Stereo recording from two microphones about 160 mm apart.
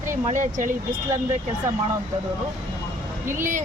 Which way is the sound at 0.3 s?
50° right (ahead or behind).